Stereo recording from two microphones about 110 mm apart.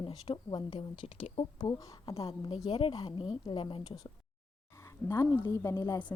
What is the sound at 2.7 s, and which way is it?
A woman's voice, 55° left (ahead or behind).